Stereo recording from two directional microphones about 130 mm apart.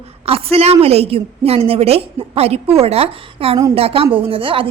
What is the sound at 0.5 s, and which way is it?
A woman's voice, 50° right (ahead or behind).